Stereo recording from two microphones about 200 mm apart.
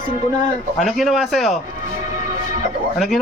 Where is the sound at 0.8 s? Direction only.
Centre (ahead or behind).